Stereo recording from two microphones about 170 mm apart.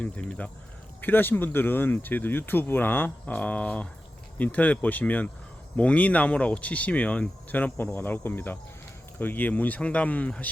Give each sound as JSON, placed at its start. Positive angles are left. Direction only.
{"t": 0.0, "sound": "speech", "side_deg": 5}